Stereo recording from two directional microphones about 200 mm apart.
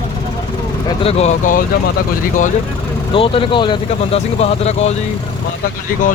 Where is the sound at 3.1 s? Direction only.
25° left (ahead or behind).